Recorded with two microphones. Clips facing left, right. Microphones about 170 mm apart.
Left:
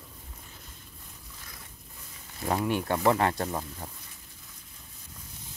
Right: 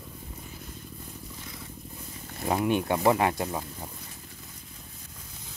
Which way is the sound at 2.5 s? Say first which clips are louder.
Right 2 dB; 15° right (ahead or behind).